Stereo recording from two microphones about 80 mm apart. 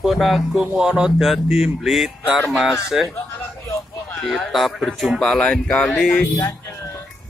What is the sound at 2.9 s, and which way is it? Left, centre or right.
Speech, centre.